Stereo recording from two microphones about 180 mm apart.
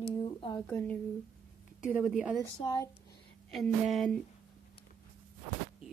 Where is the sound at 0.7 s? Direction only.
5° left (ahead or behind).